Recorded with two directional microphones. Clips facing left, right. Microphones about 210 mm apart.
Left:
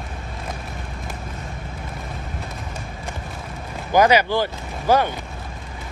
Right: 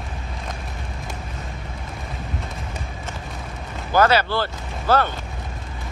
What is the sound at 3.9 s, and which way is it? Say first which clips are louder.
Speech: left 2 dB; 15° left (ahead or behind).